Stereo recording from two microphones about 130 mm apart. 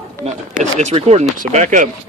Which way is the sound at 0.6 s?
60° right (ahead or behind).